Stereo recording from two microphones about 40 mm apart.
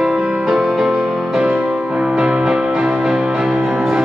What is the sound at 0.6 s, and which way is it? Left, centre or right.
Music, centre.